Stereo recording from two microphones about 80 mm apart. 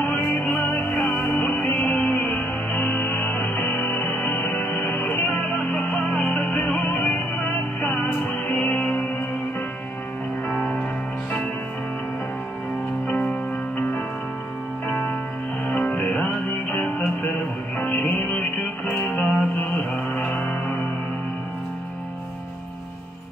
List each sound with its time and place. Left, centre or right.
0.0 s music: left
10.5 s music: centre
13.1 s music: centre